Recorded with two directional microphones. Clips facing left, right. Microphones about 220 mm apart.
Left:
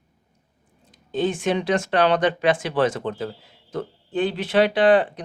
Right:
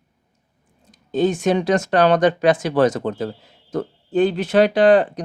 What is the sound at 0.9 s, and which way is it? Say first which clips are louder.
Speech: right 5 dB; 40° right (ahead or behind).